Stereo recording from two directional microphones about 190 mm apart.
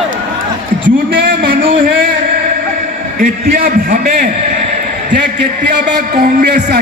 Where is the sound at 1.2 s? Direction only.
50° right (ahead or behind).